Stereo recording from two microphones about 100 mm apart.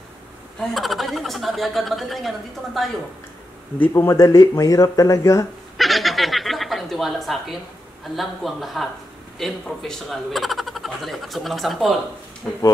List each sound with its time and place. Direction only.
0.6 s speech: centre (ahead or behind)
3.9 s speech: 30° left (ahead or behind)
5.8 s a sound: centre (ahead or behind)
8.2 s speech: centre (ahead or behind)